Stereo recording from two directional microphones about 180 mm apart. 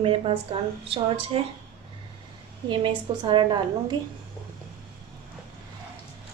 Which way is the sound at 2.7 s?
25° right (ahead or behind).